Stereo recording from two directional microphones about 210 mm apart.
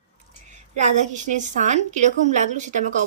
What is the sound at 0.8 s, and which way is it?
A woman's voice, 35° right (ahead or behind).